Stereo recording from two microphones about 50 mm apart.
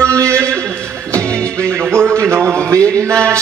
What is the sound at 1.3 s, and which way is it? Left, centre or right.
Music, left.